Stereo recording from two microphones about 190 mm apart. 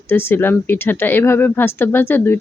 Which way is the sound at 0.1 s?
10° left (ahead or behind).